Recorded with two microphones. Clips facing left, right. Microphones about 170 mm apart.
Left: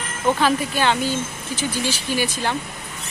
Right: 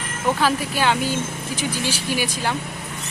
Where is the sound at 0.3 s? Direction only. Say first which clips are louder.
Left 1 dB; 5° right (ahead or behind).